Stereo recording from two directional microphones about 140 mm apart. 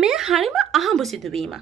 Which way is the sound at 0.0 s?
5° right (ahead or behind).